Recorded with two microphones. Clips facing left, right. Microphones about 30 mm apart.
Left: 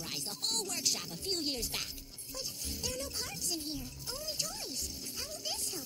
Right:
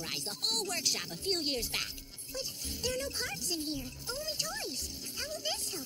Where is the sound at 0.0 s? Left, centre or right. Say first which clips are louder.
Right 3 dB; right.